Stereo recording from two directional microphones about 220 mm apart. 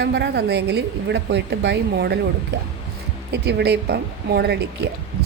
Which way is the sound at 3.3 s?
50° right (ahead or behind).